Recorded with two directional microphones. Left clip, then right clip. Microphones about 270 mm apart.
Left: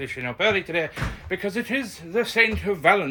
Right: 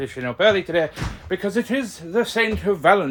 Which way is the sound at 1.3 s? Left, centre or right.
Centre.